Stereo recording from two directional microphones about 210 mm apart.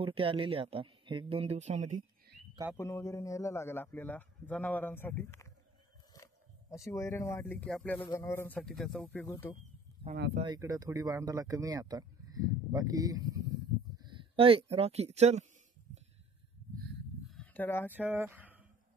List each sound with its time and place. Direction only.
0.0 s speech: 25° right (ahead or behind)
2.8 s a man's voice: 15° left (ahead or behind)
9.3 s a man's voice: 15° left (ahead or behind)
10.4 s speech: 20° right (ahead or behind)
17.3 s a sound: 5° left (ahead or behind)
17.9 s speech: 10° right (ahead or behind)